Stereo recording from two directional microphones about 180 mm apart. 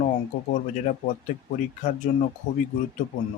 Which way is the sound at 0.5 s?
45° left (ahead or behind).